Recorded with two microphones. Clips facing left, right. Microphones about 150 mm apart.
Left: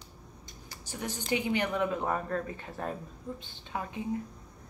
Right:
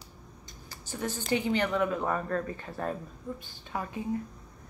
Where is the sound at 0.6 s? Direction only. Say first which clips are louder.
Right 3 dB; 15° left (ahead or behind).